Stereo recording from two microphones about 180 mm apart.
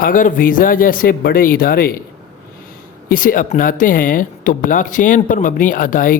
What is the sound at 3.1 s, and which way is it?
Speech, 50° left (ahead or behind).